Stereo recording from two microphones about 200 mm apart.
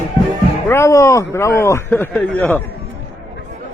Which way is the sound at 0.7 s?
15° left (ahead or behind).